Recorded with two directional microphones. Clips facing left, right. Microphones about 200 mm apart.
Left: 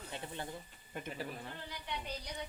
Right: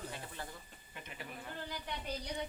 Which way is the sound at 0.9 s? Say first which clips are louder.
Left 7 dB; 45° left (ahead or behind).